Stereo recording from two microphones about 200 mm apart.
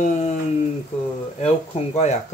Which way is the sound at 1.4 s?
35° left (ahead or behind).